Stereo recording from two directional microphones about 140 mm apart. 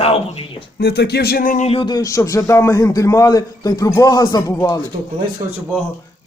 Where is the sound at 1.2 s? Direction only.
90° left.